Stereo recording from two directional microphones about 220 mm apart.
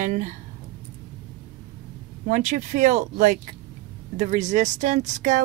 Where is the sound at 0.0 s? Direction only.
35° right (ahead or behind).